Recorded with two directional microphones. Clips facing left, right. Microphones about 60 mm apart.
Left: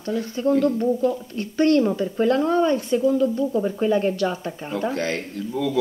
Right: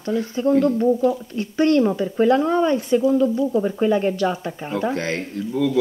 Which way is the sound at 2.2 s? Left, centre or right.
Right.